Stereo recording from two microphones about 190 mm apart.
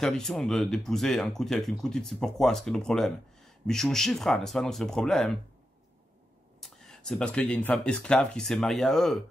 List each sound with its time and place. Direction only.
0.0 s speech: centre (ahead or behind)
6.6 s speech: 5° left (ahead or behind)